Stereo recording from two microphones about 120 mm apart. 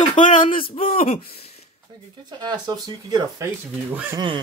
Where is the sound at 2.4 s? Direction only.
35° right (ahead or behind).